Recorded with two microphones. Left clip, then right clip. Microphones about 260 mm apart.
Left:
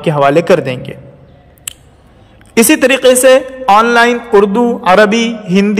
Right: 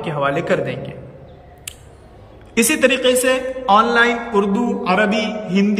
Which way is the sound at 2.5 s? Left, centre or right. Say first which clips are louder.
Left 7 dB; centre.